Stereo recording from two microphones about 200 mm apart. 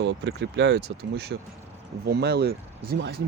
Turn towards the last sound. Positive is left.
turn(degrees=-55)  # may be behind; listen again after turning